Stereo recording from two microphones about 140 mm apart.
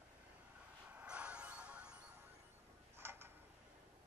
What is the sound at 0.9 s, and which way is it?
Music, 10° right (ahead or behind).